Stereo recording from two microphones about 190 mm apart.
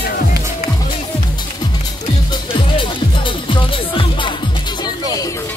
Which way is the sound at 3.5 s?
25° left (ahead or behind).